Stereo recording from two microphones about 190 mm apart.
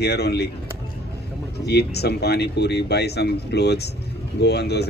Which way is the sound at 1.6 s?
60° left (ahead or behind).